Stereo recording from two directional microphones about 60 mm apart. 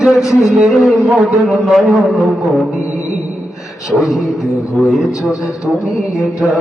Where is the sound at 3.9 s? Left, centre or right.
Centre.